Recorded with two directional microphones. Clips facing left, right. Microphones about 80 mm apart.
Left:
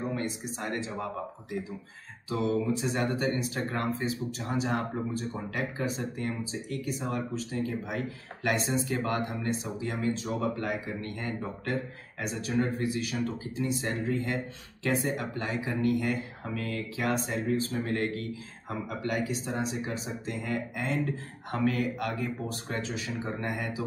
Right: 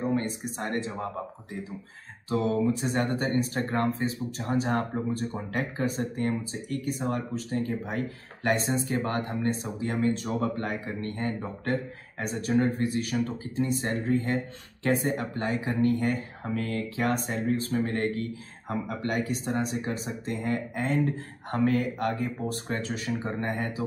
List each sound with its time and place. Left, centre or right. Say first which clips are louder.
0.1 s speech: right 4 dB; right
19.0 s speech: right 1 dB; right